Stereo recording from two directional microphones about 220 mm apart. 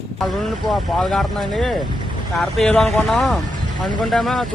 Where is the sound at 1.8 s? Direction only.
20° right (ahead or behind).